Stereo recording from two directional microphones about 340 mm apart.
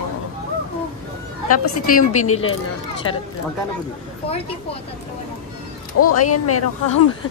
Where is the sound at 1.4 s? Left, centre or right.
Left.